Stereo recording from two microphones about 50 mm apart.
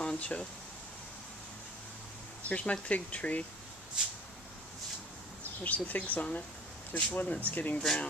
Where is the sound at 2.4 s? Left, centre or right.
Left.